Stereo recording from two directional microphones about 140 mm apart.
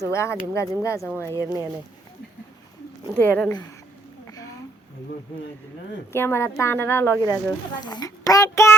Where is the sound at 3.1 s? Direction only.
10° left (ahead or behind).